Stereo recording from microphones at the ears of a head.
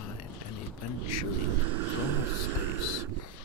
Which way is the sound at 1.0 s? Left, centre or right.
Right.